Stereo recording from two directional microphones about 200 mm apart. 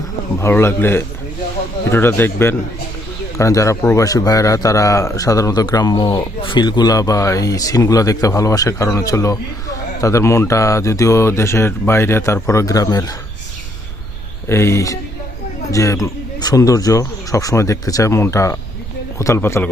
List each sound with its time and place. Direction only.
0.3 s speech: 15° left (ahead or behind)
14.4 s speech: 15° left (ahead or behind)